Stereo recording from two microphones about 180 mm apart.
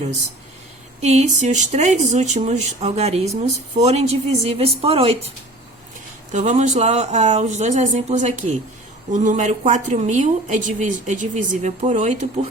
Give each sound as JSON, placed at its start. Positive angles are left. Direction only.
{"t": 1.0, "sound": "speech", "side_deg": -40}
{"t": 6.3, "sound": "a woman's voice", "side_deg": -40}